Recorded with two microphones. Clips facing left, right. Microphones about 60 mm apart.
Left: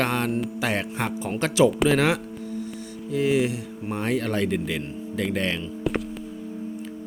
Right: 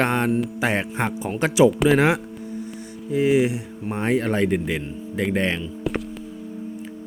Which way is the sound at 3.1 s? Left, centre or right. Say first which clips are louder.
Right 3 dB; right.